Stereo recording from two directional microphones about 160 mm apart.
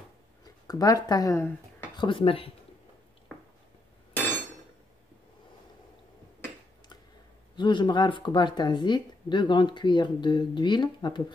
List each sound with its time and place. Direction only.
0.7 s speech: 25° left (ahead or behind)
2.0 s speech: 35° left (ahead or behind)
7.5 s speech: 30° left (ahead or behind)